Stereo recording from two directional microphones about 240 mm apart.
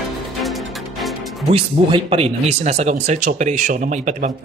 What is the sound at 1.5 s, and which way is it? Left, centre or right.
Speech, right.